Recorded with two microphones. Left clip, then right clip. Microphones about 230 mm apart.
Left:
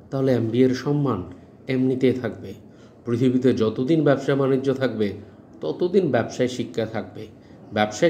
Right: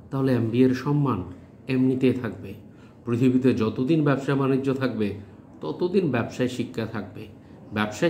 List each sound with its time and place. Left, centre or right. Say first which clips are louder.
0.1 s a man's voice: left 3 dB; centre